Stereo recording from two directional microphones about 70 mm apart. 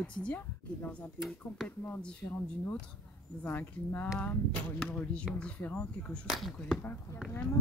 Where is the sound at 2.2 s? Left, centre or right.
Left.